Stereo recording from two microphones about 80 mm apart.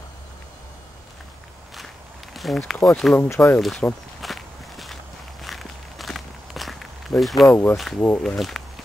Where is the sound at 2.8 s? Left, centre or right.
Centre.